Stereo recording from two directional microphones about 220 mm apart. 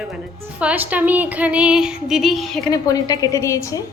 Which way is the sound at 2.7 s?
15° left (ahead or behind).